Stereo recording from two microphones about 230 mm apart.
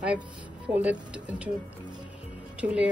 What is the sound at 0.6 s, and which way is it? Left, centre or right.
Speech, centre.